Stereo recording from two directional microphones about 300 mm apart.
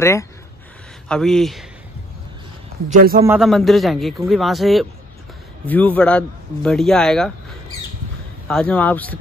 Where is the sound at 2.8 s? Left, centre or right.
Right.